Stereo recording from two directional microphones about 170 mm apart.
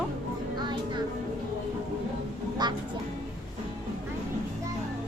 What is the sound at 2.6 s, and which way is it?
Speech, 25° right (ahead or behind).